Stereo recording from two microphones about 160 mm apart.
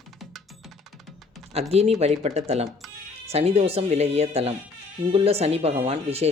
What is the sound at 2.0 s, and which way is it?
Speech, 40° right (ahead or behind).